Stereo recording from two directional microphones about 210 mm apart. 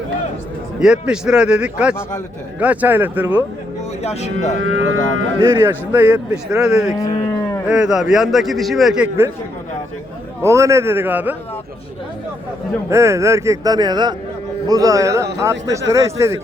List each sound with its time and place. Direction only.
0.8 s a man's voice: 5° right (ahead or behind)
4.0 s speech: 30° left (ahead or behind)
4.6 s speech: 70° right (ahead or behind)
5.5 s a man's voice: 10° right (ahead or behind)
6.9 s speech: 15° left (ahead or behind)
7.7 s a man's voice: 5° right (ahead or behind)
10.4 s a man's voice: 15° right (ahead or behind)
12.9 s a man's voice: 15° right (ahead or behind)